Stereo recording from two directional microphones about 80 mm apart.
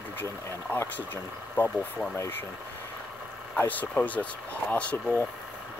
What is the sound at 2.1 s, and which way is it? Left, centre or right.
Speech, left.